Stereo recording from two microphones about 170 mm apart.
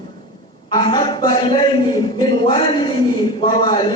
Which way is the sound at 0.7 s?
25° left (ahead or behind).